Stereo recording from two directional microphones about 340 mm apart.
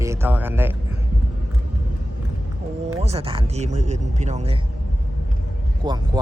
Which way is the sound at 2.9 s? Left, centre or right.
Centre.